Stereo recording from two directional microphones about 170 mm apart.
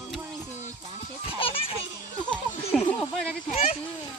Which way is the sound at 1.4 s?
35° left (ahead or behind).